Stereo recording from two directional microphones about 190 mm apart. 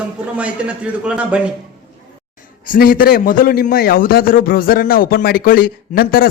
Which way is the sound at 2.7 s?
50° left (ahead or behind).